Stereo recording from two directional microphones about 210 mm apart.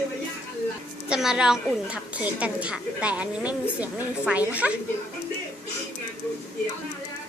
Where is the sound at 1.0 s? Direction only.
5° right (ahead or behind).